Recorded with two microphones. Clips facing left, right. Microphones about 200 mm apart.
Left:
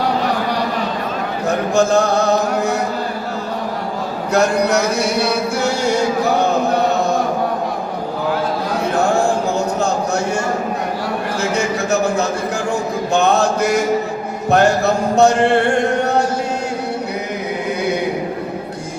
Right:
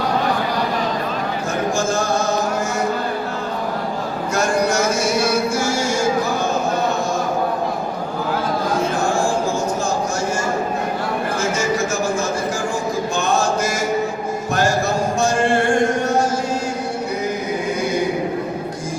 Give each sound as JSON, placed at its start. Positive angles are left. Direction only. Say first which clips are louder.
{"t": 1.5, "sound": "chant", "louder": "left 7 dB", "side_deg": 65}
{"t": 4.4, "sound": "speech", "louder": "left 4 dB", "side_deg": 65}
{"t": 11.5, "sound": "a sound", "louder": "left 2 dB", "side_deg": 65}
{"t": 13.1, "sound": "mantra", "louder": "left 6 dB", "side_deg": 65}